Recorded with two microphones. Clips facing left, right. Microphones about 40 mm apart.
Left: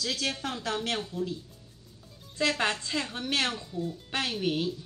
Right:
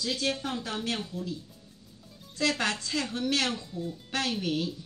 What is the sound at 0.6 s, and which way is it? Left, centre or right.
Speech, left.